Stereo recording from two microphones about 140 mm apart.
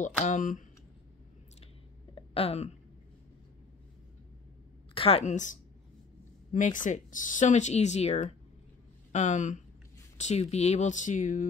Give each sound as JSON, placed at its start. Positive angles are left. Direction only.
{"t": 0.0, "sound": "speech", "side_deg": 65}
{"t": 2.1, "sound": "a sound", "side_deg": 45}
{"t": 4.9, "sound": "a woman's voice", "side_deg": 40}
{"t": 5.2, "sound": "speech", "side_deg": 60}